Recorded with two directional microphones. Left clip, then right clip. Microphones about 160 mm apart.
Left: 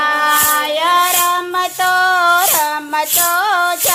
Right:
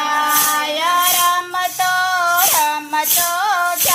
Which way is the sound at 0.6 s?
25° left (ahead or behind).